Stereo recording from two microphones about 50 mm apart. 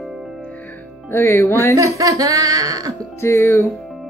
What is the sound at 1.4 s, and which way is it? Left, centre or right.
Speech, left.